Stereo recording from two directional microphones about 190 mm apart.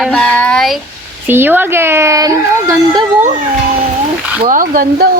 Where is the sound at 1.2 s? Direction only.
10° right (ahead or behind).